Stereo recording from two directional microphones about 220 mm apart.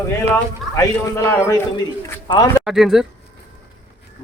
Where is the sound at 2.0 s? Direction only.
15° left (ahead or behind).